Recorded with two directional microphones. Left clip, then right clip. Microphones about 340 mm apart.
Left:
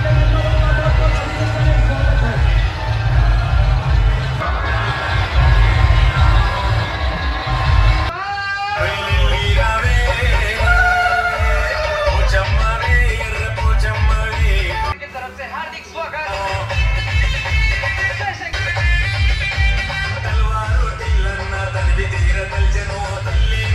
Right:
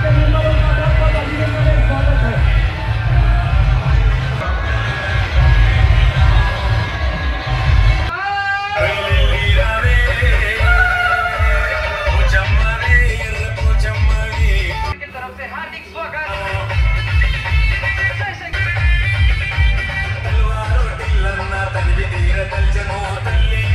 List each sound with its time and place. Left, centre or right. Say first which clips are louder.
9.6 s music: even; left